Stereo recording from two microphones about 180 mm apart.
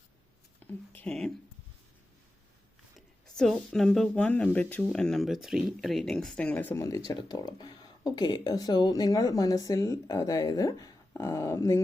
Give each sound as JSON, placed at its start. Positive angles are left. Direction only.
{"t": 0.7, "sound": "speech", "side_deg": 5}
{"t": 3.2, "sound": "speech", "side_deg": 0}